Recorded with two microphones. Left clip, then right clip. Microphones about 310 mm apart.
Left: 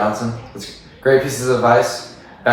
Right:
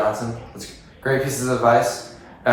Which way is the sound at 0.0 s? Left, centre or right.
Centre.